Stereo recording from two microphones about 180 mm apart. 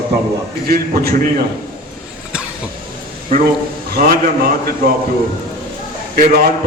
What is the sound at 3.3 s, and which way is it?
Speech, 45° right (ahead or behind).